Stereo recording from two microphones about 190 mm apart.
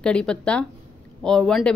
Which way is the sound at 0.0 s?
5° left (ahead or behind).